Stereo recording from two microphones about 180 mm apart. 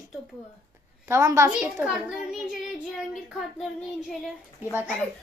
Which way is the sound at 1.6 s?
5° right (ahead or behind).